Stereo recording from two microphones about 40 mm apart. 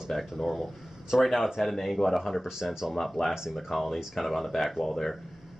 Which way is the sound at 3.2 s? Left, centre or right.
Centre.